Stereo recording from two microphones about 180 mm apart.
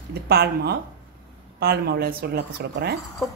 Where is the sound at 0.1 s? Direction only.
65° right (ahead or behind).